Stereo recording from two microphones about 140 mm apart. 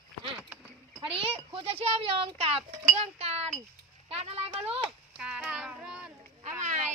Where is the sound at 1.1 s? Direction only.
40° right (ahead or behind).